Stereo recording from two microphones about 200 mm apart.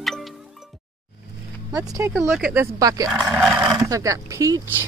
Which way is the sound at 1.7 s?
10° right (ahead or behind).